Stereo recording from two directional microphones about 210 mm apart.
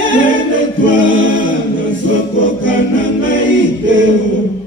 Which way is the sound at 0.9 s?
65° right (ahead or behind).